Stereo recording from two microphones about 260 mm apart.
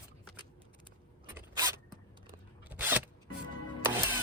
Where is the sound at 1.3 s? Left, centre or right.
Centre.